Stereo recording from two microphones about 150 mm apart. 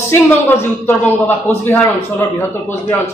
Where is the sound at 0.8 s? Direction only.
15° left (ahead or behind).